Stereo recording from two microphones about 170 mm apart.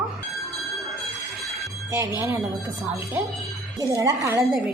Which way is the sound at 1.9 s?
15° right (ahead or behind).